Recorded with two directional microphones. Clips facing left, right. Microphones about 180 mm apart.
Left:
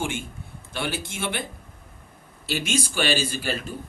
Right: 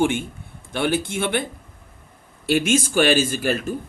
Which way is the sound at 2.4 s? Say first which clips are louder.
Right 8 dB; 55° right (ahead or behind).